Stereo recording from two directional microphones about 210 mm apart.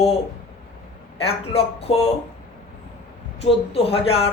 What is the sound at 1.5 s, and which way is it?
Speech, 30° left (ahead or behind).